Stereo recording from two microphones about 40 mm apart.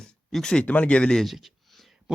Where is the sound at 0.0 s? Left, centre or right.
Centre.